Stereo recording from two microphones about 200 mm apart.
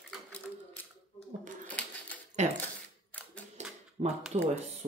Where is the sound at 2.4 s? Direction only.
35° right (ahead or behind).